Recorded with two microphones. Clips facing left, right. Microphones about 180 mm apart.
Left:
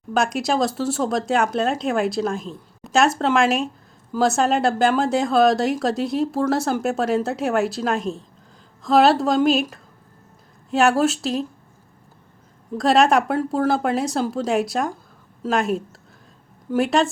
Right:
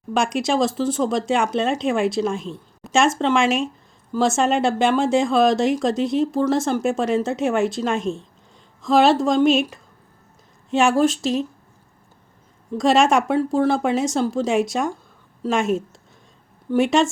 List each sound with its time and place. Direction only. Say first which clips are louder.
0.1 s speech: even; centre (ahead or behind)
12.7 s speech: even; centre (ahead or behind)